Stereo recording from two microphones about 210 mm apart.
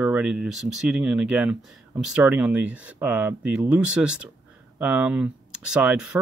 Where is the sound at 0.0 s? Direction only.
5° right (ahead or behind).